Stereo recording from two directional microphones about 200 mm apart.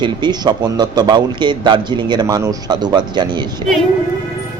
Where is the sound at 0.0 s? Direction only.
20° right (ahead or behind).